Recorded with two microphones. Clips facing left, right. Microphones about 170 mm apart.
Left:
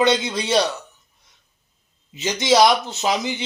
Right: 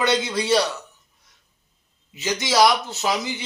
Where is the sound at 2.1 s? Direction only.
20° left (ahead or behind).